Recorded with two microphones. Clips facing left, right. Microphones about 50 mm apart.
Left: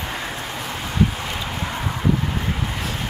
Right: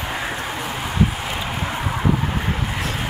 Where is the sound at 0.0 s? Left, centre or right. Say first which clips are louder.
Right 3 dB; centre.